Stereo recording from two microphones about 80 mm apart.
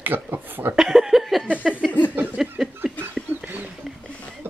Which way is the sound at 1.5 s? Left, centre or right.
Centre.